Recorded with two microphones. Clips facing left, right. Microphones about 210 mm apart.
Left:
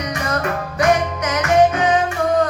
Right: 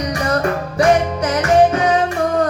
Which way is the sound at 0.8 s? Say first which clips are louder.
Right 3 dB; 30° right (ahead or behind).